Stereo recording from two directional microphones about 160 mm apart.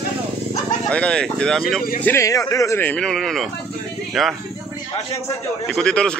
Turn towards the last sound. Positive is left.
turn(degrees=5)  # may be behind; listen again after turning